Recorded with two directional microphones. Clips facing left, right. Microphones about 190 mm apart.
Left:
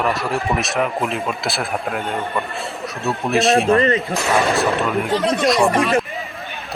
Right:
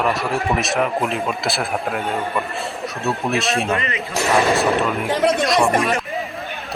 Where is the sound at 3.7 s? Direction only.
35° left (ahead or behind).